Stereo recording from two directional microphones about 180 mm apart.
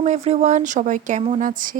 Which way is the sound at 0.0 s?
40° right (ahead or behind).